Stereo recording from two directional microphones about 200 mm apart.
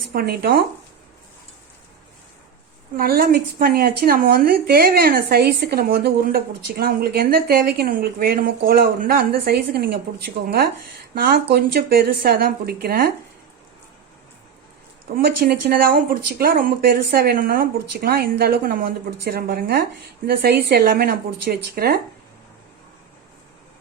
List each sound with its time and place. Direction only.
0.1 s speech: 50° right (ahead or behind)
3.0 s speech: 50° right (ahead or behind)
11.1 s speech: 50° right (ahead or behind)
15.1 s speech: 50° right (ahead or behind)